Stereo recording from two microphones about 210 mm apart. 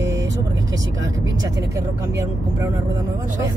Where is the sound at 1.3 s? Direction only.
15° right (ahead or behind).